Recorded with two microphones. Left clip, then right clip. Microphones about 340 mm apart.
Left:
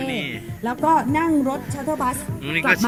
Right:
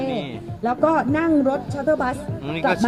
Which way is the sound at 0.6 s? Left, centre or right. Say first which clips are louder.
Even; right.